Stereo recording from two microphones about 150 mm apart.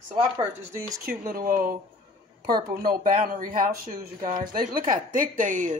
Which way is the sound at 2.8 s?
70° right (ahead or behind).